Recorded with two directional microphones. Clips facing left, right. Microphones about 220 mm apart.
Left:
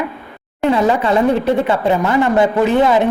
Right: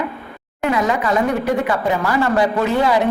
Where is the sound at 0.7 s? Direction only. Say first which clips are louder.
Left 4 dB; 30° left (ahead or behind).